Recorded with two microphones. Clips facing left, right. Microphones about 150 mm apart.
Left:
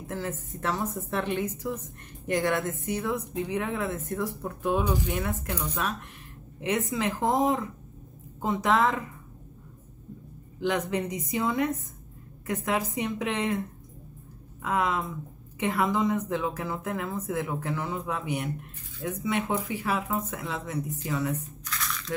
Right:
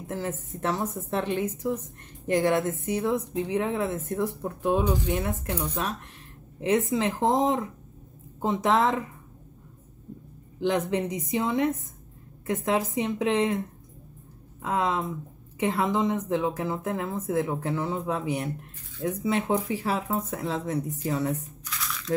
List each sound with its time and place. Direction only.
0.0 s a woman's voice: 20° right (ahead or behind)
10.6 s a woman's voice: 25° right (ahead or behind)
14.6 s a woman's voice: 25° right (ahead or behind)
21.6 s a sound: centre (ahead or behind)